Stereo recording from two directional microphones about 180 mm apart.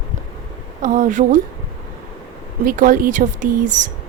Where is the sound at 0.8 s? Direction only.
45° right (ahead or behind).